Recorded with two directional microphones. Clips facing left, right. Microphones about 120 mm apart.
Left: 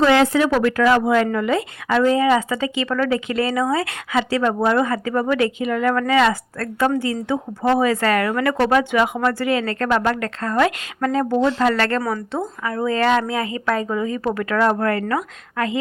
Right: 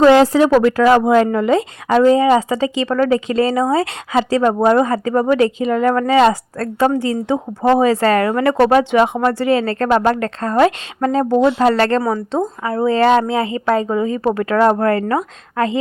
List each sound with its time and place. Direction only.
0.0 s a woman's voice: 35° right (ahead or behind)
11.3 s speech: 15° right (ahead or behind)
11.6 s a woman's voice: 35° right (ahead or behind)